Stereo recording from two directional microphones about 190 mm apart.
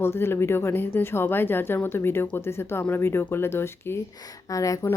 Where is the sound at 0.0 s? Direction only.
15° left (ahead or behind).